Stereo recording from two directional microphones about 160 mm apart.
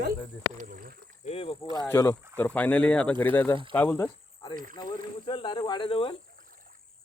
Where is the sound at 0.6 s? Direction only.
60° right (ahead or behind).